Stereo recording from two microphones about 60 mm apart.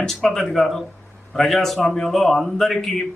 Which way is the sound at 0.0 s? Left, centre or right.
Centre.